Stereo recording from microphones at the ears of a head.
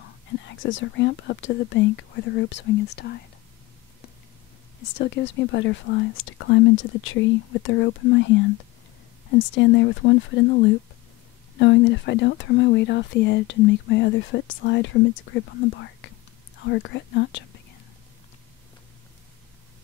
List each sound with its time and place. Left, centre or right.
0.0 s speech: left
4.7 s speech: left